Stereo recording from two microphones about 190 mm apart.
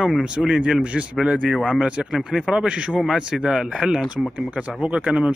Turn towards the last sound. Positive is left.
turn(degrees=-5)  # may be behind; listen again after turning